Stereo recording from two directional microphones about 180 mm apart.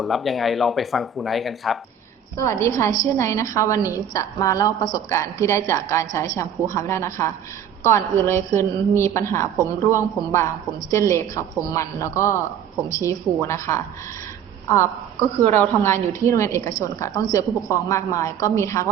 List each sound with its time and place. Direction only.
0.0 s speech: centre (ahead or behind)
2.4 s a woman's voice: 15° left (ahead or behind)